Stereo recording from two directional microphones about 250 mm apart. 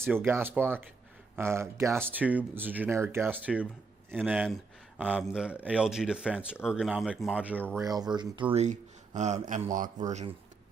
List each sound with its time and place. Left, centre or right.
0.0 s speech: centre; by 10.3 s right